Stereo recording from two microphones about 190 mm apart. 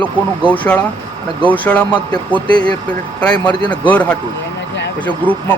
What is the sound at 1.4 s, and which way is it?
Speech, 5° left (ahead or behind).